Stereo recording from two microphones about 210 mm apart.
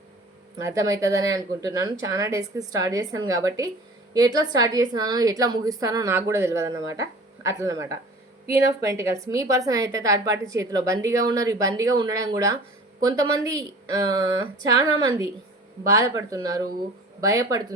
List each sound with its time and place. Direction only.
0.6 s a woman's voice: 15° right (ahead or behind)
14.7 s a woman's voice: 20° right (ahead or behind)